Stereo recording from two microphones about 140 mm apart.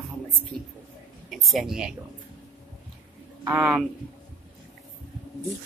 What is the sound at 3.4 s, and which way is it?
Speech, 10° right (ahead or behind).